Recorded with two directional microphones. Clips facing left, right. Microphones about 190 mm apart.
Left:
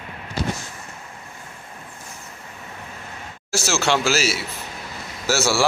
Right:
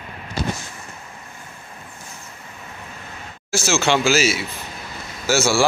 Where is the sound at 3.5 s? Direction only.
Centre (ahead or behind).